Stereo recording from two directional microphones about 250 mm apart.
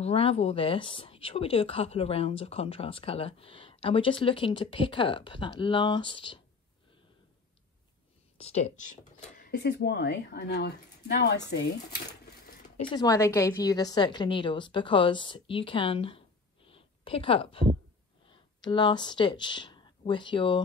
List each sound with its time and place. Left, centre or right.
0.0 s speech: left
8.4 s speech: left
9.4 s speech: left
12.3 s cash register: left
12.9 s speech: centre